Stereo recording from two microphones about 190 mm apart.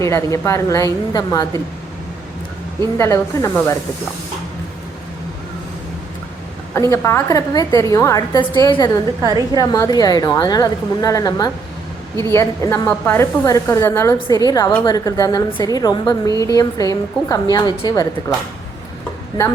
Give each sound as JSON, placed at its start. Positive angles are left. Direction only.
{"t": 0.0, "sound": "a woman's voice", "side_deg": 15}
{"t": 2.8, "sound": "a woman's voice", "side_deg": 15}
{"t": 6.7, "sound": "a woman's voice", "side_deg": 15}
{"t": 9.2, "sound": "a woman's voice", "side_deg": -20}
{"t": 9.6, "sound": "a woman's voice", "side_deg": 20}